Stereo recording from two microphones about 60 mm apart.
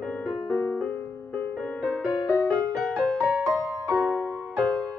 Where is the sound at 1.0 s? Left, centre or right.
Left.